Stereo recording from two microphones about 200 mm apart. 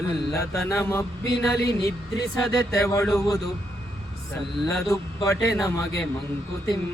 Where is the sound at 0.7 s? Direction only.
15° left (ahead or behind).